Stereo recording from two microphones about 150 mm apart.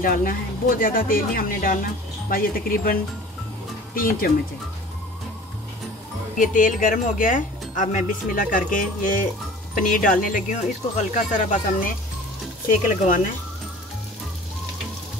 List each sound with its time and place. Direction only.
0.0 s speech: 70° left (ahead or behind)
6.3 s speech: 60° left (ahead or behind)